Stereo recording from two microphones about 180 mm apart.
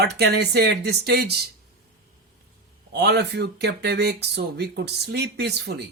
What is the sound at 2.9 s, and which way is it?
Speech, 65° right (ahead or behind).